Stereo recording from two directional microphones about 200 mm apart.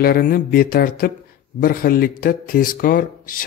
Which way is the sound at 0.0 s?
45° left (ahead or behind).